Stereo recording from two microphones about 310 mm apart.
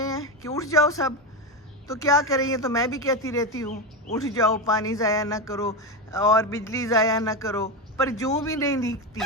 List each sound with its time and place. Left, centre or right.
0.0 s a woman's voice: centre